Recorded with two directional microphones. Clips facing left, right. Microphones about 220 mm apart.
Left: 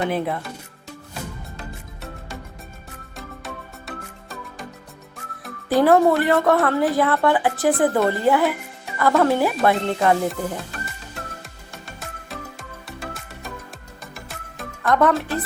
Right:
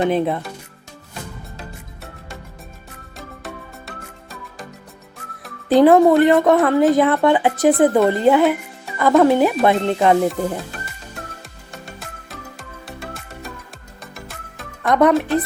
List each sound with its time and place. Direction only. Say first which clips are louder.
0.0 s speech: right 5 dB; 25° right (ahead or behind)
3.2 s music: right 1 dB; centre (ahead or behind)
5.6 s speech: right 4 dB; 20° right (ahead or behind)
11.7 s music: right 2 dB; centre (ahead or behind)
14.8 s speech: right 3 dB; 15° right (ahead or behind)